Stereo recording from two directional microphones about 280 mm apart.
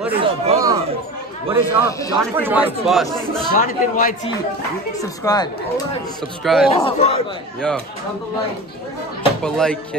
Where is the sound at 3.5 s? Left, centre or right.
Left.